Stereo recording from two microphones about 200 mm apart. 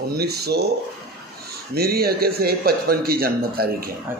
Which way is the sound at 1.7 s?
50° right (ahead or behind).